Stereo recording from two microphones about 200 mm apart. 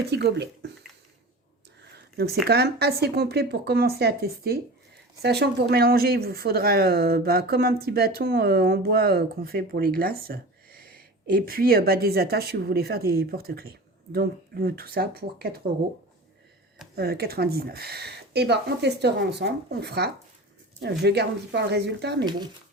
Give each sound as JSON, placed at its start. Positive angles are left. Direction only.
{"t": 0.1, "sound": "speech", "side_deg": -55}
{"t": 2.1, "sound": "speech", "side_deg": -50}
{"t": 16.9, "sound": "speech", "side_deg": -50}
{"t": 22.2, "sound": "speech", "side_deg": -20}